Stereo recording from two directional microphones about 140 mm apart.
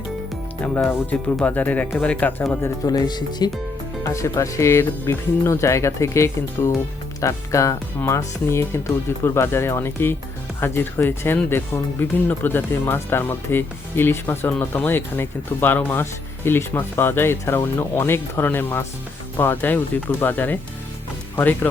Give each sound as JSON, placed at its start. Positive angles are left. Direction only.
{"t": 0.6, "sound": "speech", "side_deg": 10}
{"t": 2.4, "sound": "speech", "side_deg": 20}